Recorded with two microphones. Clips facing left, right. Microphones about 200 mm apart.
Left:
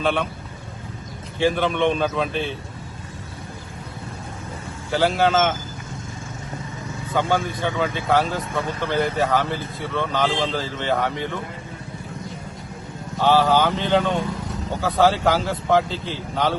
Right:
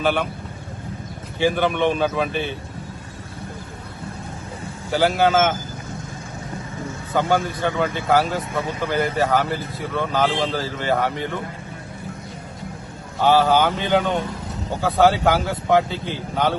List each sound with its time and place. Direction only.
0.0 s speech: 5° right (ahead or behind)
1.4 s speech: 5° right (ahead or behind)
4.9 s speech: centre (ahead or behind)
7.2 s speech: centre (ahead or behind)
13.2 s speech: 10° right (ahead or behind)